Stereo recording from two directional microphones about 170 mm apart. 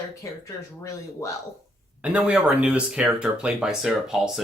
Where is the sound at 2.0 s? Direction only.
5° right (ahead or behind).